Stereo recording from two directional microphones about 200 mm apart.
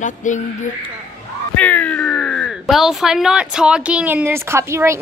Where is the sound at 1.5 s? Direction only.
10° left (ahead or behind).